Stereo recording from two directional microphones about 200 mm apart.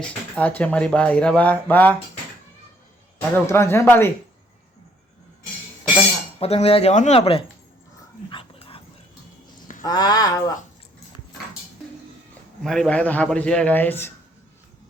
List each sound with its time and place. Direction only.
0.3 s speech: 5° left (ahead or behind)
3.3 s speech: 10° left (ahead or behind)
6.4 s speech: 30° left (ahead or behind)
8.3 s dog: 25° left (ahead or behind)
9.8 s speech: 20° left (ahead or behind)
12.6 s speech: centre (ahead or behind)